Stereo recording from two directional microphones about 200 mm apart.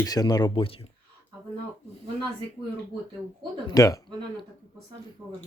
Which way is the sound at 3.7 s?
15° left (ahead or behind).